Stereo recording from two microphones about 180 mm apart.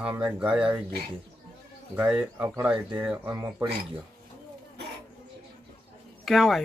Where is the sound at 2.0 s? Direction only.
5° right (ahead or behind).